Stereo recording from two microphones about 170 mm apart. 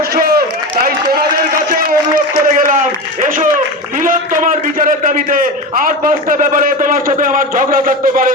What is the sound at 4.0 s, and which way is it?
A man's voice, 50° right (ahead or behind).